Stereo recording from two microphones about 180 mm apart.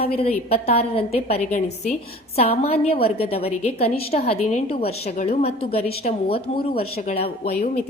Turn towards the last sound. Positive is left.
turn(degrees=35)  # may be behind; listen again after turning